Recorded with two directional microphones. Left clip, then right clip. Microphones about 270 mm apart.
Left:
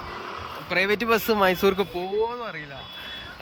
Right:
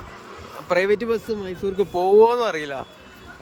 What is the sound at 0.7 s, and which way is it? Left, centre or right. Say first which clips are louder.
Speech: right 2 dB; centre.